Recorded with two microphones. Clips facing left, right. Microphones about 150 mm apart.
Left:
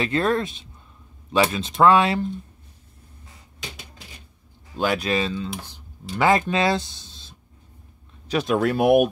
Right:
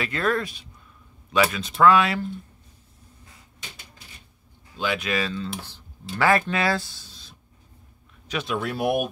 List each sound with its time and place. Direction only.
0.0 s speech: 30° left (ahead or behind)
4.7 s speech: 40° left (ahead or behind)
5.6 s speech: 15° left (ahead or behind)
8.3 s speech: 40° left (ahead or behind)
8.6 s speech: 55° left (ahead or behind)